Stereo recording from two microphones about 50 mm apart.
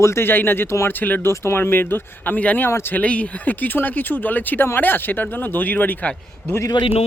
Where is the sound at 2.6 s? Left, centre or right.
Left.